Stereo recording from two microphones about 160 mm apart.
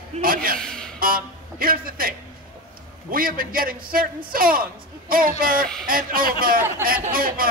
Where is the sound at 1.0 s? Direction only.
65° right (ahead or behind).